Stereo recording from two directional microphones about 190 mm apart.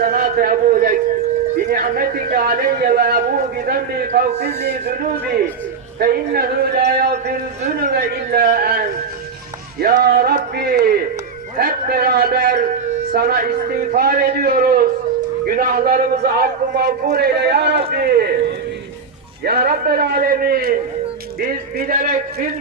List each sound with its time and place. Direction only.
0.0 s a man's voice: 45° right (ahead or behind)
6.0 s a man's voice: 50° right (ahead or behind)
9.8 s a man's voice: 55° right (ahead or behind)
19.5 s a man's voice: 50° right (ahead or behind)